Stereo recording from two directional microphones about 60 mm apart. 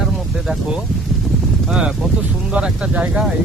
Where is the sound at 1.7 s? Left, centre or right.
Centre.